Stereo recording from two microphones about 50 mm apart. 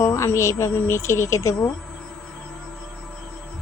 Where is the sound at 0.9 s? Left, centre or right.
Left.